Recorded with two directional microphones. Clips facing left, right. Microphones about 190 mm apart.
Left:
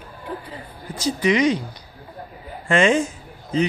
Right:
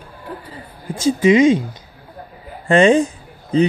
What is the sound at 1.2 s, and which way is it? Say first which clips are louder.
Speech: right 6 dB; 25° right (ahead or behind).